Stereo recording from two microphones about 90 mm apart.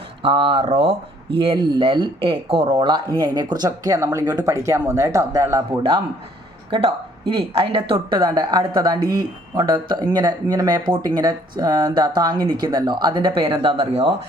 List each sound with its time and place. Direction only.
0.2 s speech: 80° right
1.5 s speech: 55° right (ahead or behind)
6.7 s a woman's voice: 90° right
7.9 s speech: 55° right (ahead or behind); by 14.1 s 85° right